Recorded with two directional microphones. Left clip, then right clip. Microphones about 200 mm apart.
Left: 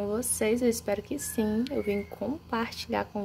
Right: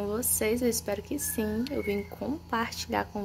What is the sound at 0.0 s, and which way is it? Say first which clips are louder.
Speech: left 1 dB; 10° left (ahead or behind).